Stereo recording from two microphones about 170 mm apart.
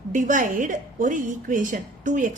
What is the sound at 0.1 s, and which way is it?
A woman's voice, 45° right (ahead or behind).